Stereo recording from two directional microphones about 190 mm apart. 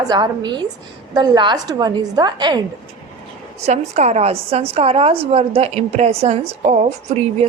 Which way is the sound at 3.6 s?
35° right (ahead or behind).